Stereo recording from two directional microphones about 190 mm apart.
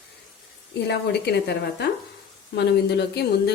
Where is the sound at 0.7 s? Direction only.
60° left (ahead or behind).